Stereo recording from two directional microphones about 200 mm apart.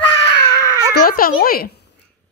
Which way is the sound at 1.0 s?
45° left (ahead or behind).